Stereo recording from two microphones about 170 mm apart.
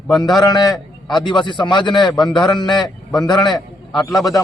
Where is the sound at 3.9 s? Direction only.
Centre (ahead or behind).